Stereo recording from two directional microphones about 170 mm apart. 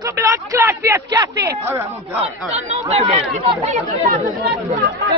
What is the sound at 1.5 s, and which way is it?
Speech, 15° right (ahead or behind).